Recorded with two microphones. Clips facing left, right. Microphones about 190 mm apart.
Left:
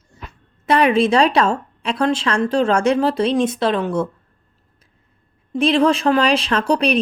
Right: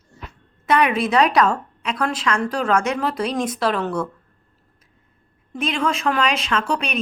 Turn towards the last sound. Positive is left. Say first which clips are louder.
# left 6 dB
turn(degrees=35)  # may be behind; listen again after turning